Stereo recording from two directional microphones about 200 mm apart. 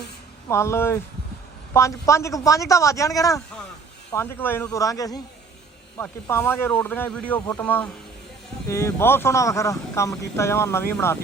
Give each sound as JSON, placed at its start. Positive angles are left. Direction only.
{"t": 0.4, "sound": "speech", "side_deg": 15}